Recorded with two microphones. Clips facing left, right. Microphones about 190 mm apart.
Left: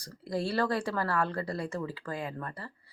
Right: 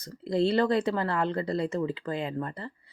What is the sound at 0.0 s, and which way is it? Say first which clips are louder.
Speech: right 7 dB; 20° right (ahead or behind).